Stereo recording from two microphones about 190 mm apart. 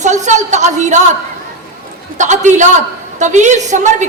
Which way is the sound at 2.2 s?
40° right (ahead or behind).